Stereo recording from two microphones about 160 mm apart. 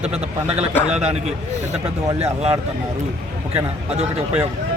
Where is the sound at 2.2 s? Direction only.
40° right (ahead or behind).